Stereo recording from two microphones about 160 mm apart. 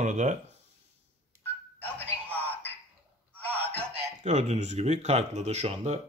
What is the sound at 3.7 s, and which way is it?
Speech, 45° right (ahead or behind).